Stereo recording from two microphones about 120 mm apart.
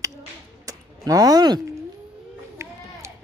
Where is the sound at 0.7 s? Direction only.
30° right (ahead or behind).